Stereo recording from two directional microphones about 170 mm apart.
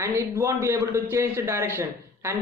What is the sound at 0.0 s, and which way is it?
A man's voice, 15° right (ahead or behind).